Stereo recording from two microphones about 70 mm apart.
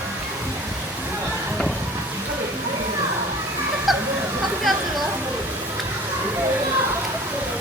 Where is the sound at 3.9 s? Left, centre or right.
Centre.